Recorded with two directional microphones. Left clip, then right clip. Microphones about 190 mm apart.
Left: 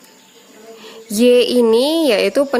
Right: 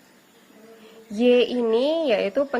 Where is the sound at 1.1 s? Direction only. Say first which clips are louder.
Left 7 dB; 45° left (ahead or behind).